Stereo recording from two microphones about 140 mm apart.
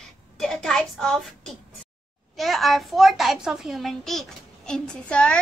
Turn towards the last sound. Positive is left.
turn(degrees=5)  # may be behind; listen again after turning